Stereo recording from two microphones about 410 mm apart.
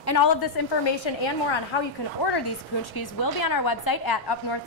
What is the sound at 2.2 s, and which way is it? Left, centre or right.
Speech, left.